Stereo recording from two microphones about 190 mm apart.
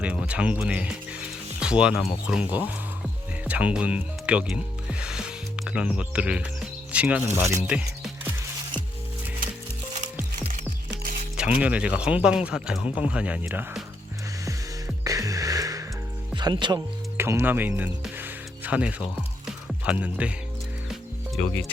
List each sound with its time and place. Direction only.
0.0 s speech: 5° right (ahead or behind)
10.5 s music: 50° right (ahead or behind)
11.3 s speech: 5° right (ahead or behind)
14.4 s music: 15° right (ahead or behind)
16.3 s speech: 25° right (ahead or behind)
17.2 s music: 15° right (ahead or behind)